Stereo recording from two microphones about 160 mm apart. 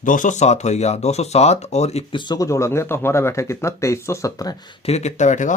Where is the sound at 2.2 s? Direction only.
25° left (ahead or behind).